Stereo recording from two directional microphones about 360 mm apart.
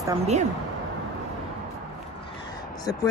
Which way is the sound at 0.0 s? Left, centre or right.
Centre.